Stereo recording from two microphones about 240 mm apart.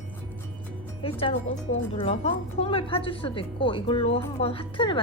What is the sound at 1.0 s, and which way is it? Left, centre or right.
A woman's voice, left.